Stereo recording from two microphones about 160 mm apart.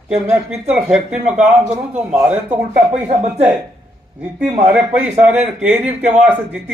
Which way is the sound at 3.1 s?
45° right (ahead or behind).